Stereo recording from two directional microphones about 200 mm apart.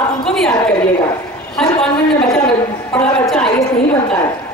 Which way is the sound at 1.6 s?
5° left (ahead or behind).